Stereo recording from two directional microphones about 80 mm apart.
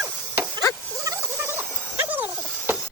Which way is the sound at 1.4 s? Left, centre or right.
Right.